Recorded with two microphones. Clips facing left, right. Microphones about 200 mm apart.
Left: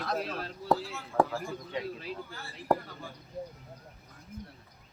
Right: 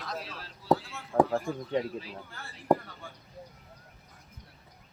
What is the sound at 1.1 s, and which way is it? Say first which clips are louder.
Speech: right 2 dB; 40° right (ahead or behind).